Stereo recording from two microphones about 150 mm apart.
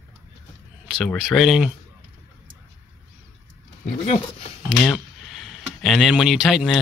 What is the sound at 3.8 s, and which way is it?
Speech, 45° left (ahead or behind).